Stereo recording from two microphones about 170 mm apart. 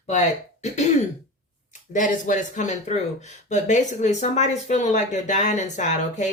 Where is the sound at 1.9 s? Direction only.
50° left (ahead or behind).